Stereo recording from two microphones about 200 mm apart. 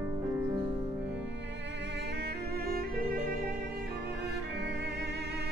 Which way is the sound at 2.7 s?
45° right (ahead or behind).